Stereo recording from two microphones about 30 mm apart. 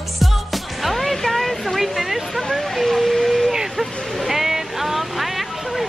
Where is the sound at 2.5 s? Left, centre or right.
Centre.